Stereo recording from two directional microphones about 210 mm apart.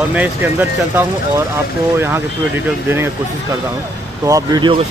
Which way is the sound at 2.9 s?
10° right (ahead or behind).